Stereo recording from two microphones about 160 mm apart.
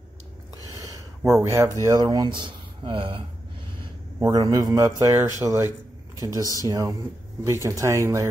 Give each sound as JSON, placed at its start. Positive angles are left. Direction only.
{"t": 0.7, "sound": "speech", "side_deg": -20}
{"t": 4.2, "sound": "a man's voice", "side_deg": -25}